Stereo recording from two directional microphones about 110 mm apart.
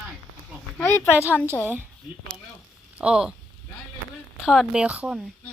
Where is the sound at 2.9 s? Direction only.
10° right (ahead or behind).